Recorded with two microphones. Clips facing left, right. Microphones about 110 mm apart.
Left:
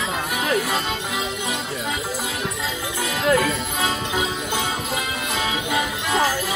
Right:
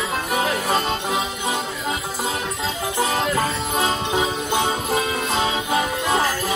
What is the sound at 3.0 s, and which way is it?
Music, 35° right (ahead or behind).